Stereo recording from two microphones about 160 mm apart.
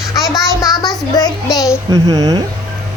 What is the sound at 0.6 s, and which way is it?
Child singing, 25° left (ahead or behind).